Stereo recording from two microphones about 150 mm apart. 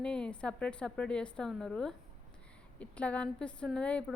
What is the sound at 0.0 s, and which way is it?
A woman's voice, 5° left (ahead or behind).